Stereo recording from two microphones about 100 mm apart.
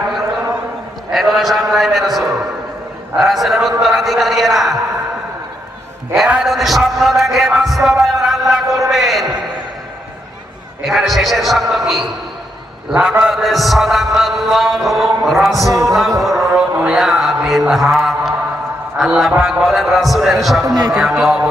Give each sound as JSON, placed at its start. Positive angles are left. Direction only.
{"t": 1.1, "sound": "a sound", "side_deg": -5}
{"t": 3.2, "sound": "a man's voice", "side_deg": 0}
{"t": 6.1, "sound": "a man's voice", "side_deg": -5}
{"t": 10.8, "sound": "a man's voice", "side_deg": 0}
{"t": 15.6, "sound": "music", "side_deg": -35}
{"t": 16.2, "sound": "music", "side_deg": 0}
{"t": 17.7, "sound": "a sound", "side_deg": 0}
{"t": 18.9, "sound": "a man's voice", "side_deg": -5}